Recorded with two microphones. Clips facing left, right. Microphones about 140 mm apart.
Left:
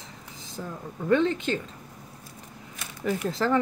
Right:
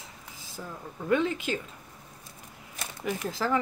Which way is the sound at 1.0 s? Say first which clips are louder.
Left 4 dB; 5° right (ahead or behind).